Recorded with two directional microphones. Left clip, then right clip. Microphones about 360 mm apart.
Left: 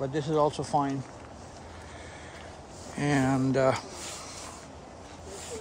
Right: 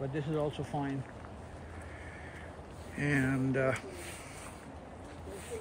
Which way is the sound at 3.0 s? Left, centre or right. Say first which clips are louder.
Left 5 dB; centre.